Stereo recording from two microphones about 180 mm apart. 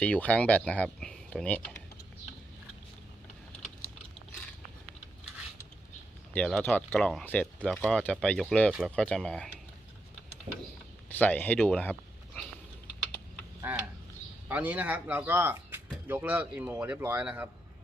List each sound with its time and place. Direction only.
0.0 s speech: 5° left (ahead or behind)
6.3 s speech: 10° left (ahead or behind)
11.1 s speech: 10° left (ahead or behind)
13.7 s speech: 10° right (ahead or behind)